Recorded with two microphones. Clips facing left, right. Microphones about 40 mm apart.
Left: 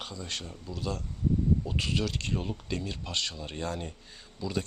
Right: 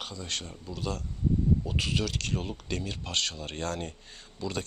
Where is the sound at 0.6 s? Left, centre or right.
Right.